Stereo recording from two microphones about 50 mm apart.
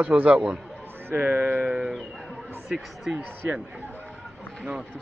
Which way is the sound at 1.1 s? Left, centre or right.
Right.